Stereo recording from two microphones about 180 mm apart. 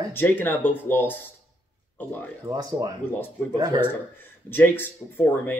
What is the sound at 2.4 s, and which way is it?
Speech, 20° right (ahead or behind).